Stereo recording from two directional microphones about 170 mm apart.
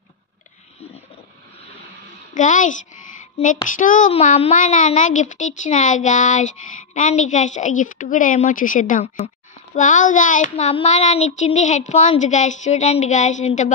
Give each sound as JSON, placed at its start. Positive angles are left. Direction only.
{"t": 2.3, "sound": "a child's voice", "side_deg": 50}